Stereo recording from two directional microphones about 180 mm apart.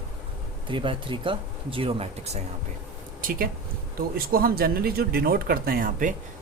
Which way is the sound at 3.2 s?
50° right (ahead or behind).